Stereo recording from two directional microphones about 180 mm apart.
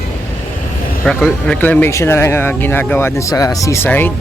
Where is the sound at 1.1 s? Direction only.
5° left (ahead or behind).